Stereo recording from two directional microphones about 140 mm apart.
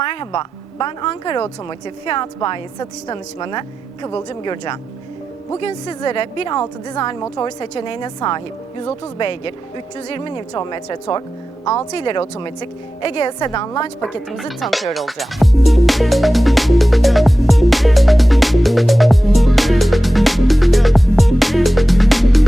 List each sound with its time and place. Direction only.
0.0 s a woman's voice: 35° left (ahead or behind)
14.3 s speech: centre (ahead or behind)
14.9 s music: centre (ahead or behind)